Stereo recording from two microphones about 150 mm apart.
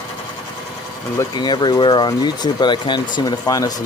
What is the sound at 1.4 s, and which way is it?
Speech, 30° left (ahead or behind).